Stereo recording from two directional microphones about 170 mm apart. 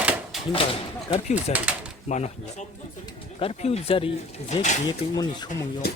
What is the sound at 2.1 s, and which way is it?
Speech, 35° left (ahead or behind).